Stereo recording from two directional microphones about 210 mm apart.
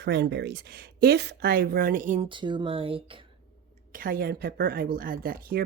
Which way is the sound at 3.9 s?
45° right (ahead or behind).